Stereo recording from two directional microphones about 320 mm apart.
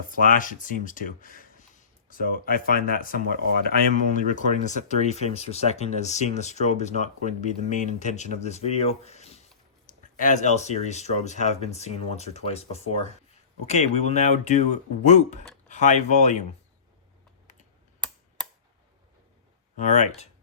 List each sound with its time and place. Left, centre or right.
0.1 s speech: left
17.4 s computer keyboard: left
19.7 s speech: left